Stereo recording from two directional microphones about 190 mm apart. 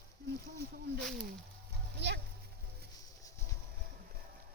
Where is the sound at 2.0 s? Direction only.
65° right (ahead or behind).